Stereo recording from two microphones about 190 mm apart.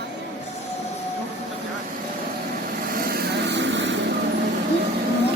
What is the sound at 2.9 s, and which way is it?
Vehicle, 50° right (ahead or behind).